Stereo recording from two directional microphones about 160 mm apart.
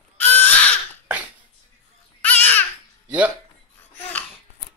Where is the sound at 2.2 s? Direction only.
10° left (ahead or behind).